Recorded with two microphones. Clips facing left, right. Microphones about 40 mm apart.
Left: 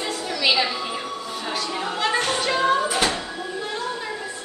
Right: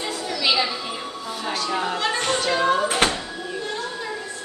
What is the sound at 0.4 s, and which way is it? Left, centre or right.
Music, centre.